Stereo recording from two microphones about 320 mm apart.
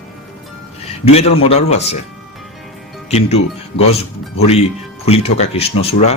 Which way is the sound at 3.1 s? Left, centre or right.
Centre.